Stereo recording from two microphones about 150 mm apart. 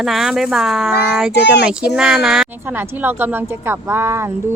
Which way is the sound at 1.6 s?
5° right (ahead or behind).